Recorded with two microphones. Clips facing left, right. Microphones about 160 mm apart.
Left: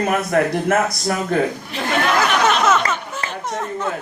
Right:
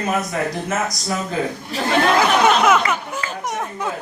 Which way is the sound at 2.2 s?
10° right (ahead or behind).